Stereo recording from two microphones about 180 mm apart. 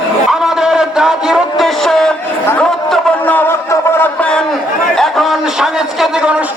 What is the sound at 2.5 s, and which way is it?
Music, 5° left (ahead or behind).